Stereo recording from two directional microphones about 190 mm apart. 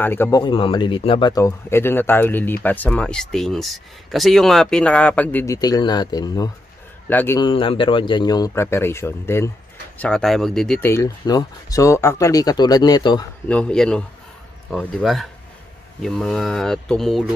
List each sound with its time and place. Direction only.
0.0 s speech: 10° left (ahead or behind)
0.4 s speech: 25° left (ahead or behind)
7.1 s speech: 10° left (ahead or behind)
7.3 s a man's voice: 25° left (ahead or behind)
13.5 s speech: 5° left (ahead or behind)